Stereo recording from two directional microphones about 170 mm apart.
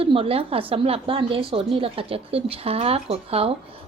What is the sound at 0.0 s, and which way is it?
Speech, 35° right (ahead or behind).